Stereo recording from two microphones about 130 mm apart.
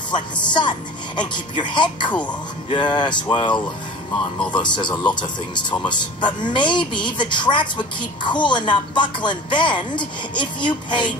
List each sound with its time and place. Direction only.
0.1 s speech: 35° left (ahead or behind)